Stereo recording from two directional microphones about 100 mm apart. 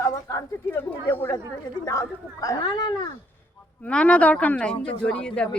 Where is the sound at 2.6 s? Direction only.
50° left (ahead or behind).